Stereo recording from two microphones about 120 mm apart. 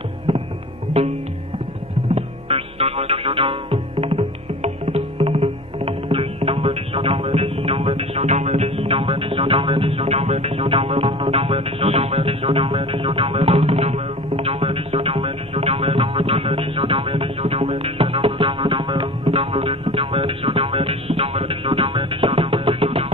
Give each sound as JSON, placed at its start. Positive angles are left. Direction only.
{"t": 0.3, "sound": "music", "side_deg": -50}
{"t": 1.0, "sound": "music", "side_deg": -60}
{"t": 2.1, "sound": "music", "side_deg": -55}
{"t": 4.2, "sound": "music", "side_deg": -70}
{"t": 4.8, "sound": "music", "side_deg": -45}
{"t": 8.6, "sound": "music", "side_deg": -50}
{"t": 19.5, "sound": "music", "side_deg": -60}